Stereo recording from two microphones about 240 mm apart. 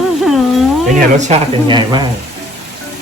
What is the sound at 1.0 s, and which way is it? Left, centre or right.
Speech, right.